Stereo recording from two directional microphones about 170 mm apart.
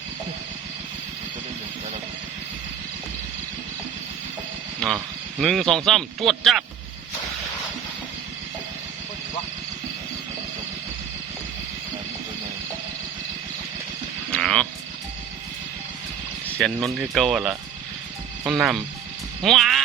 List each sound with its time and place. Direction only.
4.8 s speech: 5° left (ahead or behind)
14.3 s a sound: 5° left (ahead or behind)
16.6 s speech: centre (ahead or behind)